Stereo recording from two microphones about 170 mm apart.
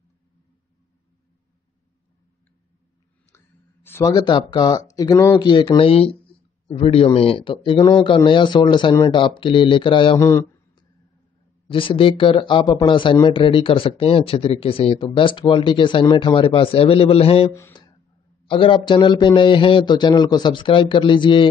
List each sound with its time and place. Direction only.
3.3 s a man's voice: 15° left (ahead or behind); by 10.2 s 30° left (ahead or behind)
10.2 s a sound: 25° left (ahead or behind)
11.7 s a man's voice: 30° left (ahead or behind)
17.5 s speech: 15° left (ahead or behind)
18.5 s a man's voice: 30° left (ahead or behind)